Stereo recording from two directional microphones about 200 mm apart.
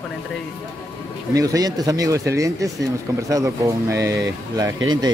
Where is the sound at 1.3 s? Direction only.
15° right (ahead or behind).